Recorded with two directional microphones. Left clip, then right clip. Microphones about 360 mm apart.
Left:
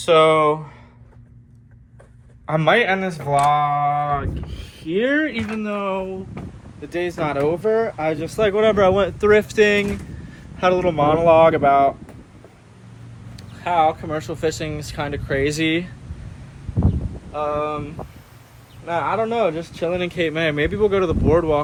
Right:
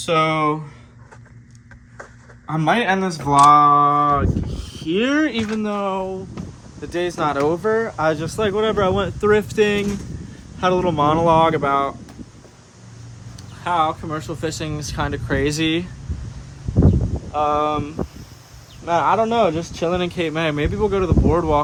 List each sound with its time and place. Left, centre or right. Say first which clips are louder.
0.0 s speech: left 4 dB; centre
2.5 s speech: left 2 dB; centre
3.2 s mantra: right 6 dB; right
4.8 s speech: even; centre
13.7 s speech: left 2 dB; centre
17.3 s speech: right 4 dB; centre
18.9 s speech: right 4 dB; centre